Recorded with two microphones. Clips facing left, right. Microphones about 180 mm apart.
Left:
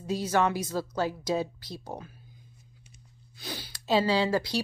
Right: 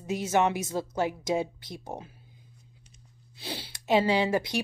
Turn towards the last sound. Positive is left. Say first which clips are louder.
# even
turn(degrees=-20)  # may be behind; listen again after turning